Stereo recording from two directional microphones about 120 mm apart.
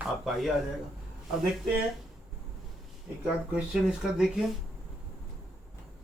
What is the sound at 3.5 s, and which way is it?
Speech, 5° right (ahead or behind).